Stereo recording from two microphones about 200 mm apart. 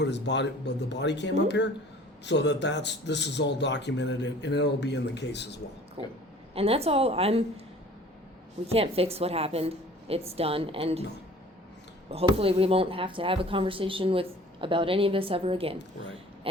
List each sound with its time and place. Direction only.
0.0 s a man's voice: 60° left (ahead or behind)
6.5 s speech: 30° right (ahead or behind)
8.6 s speech: 30° right (ahead or behind)
12.1 s speech: 30° right (ahead or behind)